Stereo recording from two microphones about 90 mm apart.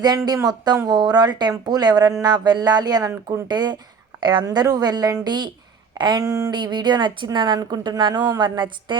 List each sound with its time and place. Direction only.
0.4 s speech: 50° right (ahead or behind)
3.5 s speech: 50° right (ahead or behind)
6.2 s speech: 40° right (ahead or behind)
6.5 s a woman's voice: 55° right (ahead or behind)